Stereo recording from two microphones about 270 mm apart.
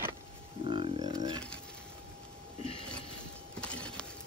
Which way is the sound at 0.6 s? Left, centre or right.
Centre.